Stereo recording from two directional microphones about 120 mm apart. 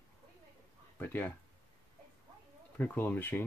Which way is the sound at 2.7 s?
15° left (ahead or behind).